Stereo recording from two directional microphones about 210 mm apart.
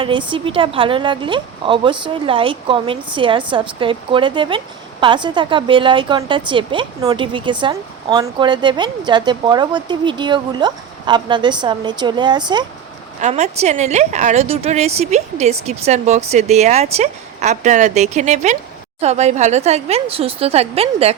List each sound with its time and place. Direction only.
0.0 s a woman's voice: 25° right (ahead or behind)
13.2 s a woman's voice: 30° right (ahead or behind)